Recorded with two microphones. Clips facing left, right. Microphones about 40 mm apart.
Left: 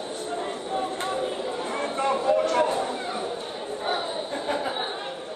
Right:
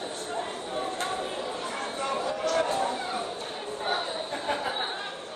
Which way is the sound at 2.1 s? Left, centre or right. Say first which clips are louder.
Left 7 dB; left.